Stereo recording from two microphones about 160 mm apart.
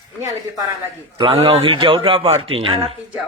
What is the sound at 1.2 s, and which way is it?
A man's voice, 35° right (ahead or behind).